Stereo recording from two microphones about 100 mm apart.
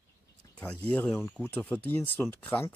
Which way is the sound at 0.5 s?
10° left (ahead or behind).